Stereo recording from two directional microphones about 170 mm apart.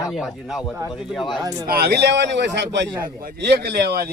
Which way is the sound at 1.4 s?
20° right (ahead or behind).